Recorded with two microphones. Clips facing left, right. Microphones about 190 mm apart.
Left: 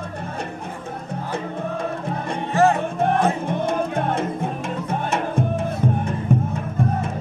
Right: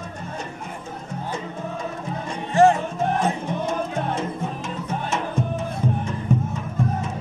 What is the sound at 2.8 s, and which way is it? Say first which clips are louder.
Music: left 3 dB; 55° left (ahead or behind).